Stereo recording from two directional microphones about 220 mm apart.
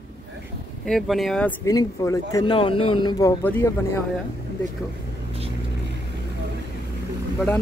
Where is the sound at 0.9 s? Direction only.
Centre (ahead or behind).